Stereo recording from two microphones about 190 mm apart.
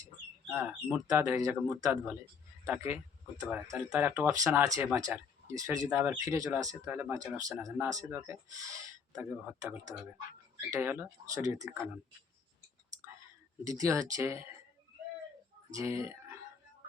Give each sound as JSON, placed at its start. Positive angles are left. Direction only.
{"t": 0.9, "sound": "speech", "side_deg": -20}
{"t": 13.7, "sound": "speech", "side_deg": -15}
{"t": 15.7, "sound": "speech", "side_deg": -15}